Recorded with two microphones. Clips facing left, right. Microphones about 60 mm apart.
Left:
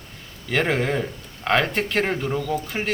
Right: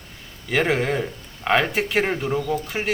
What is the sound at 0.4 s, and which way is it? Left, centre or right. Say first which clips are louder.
A man's voice: right 1 dB; centre.